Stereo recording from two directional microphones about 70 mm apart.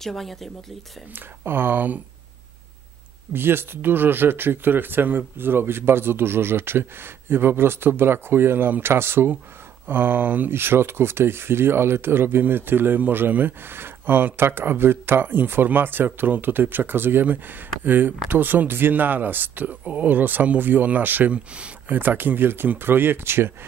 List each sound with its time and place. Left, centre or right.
0.0 s speech: centre
1.4 s speech: right
3.3 s speech: right